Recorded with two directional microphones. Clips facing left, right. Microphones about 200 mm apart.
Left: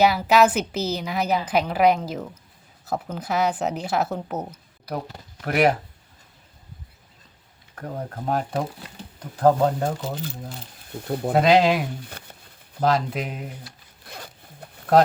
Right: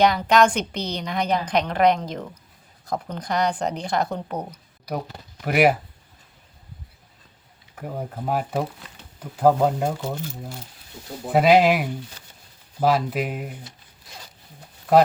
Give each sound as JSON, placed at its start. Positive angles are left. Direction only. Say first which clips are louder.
{"t": 0.0, "sound": "a woman's voice", "louder": "even", "side_deg": 5}
{"t": 7.8, "sound": "speech", "louder": "right 1 dB", "side_deg": -5}
{"t": 10.9, "sound": "speech", "louder": "left 8 dB", "side_deg": 60}
{"t": 11.3, "sound": "speech", "louder": "right 1 dB", "side_deg": -5}
{"t": 12.2, "sound": "a sound", "louder": "left 7 dB", "side_deg": 60}
{"t": 12.8, "sound": "speech", "louder": "right 1 dB", "side_deg": -5}
{"t": 14.0, "sound": "zipper", "louder": "left 5 dB", "side_deg": 55}